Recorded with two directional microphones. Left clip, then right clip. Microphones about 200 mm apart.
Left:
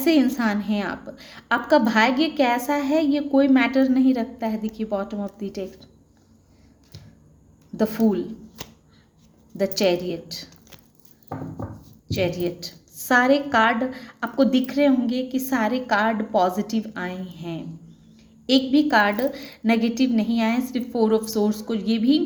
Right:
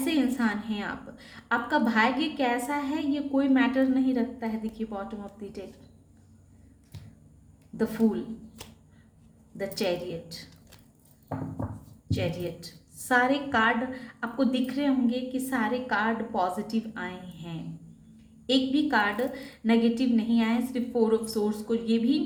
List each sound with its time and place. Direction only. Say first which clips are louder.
0.0 s a woman's voice: left 7 dB; 45° left (ahead or behind)
7.8 s a woman's voice: left 5 dB; 45° left (ahead or behind)
9.6 s a woman's voice: left 8 dB; 45° left (ahead or behind)
12.0 s a woman's voice: left 8 dB; 45° left (ahead or behind)